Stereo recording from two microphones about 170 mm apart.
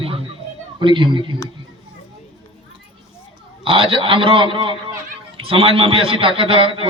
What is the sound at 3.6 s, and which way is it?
A man's voice, 30° right (ahead or behind).